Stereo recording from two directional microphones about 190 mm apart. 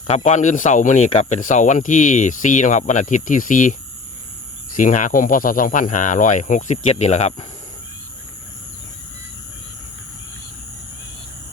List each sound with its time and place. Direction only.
0.1 s speech: 40° left (ahead or behind)